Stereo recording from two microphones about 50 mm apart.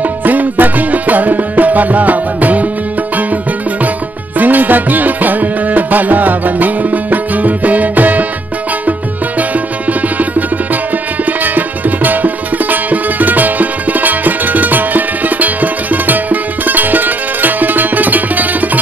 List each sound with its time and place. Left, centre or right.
0.2 s music: right
4.4 s music: right
9.4 s music: right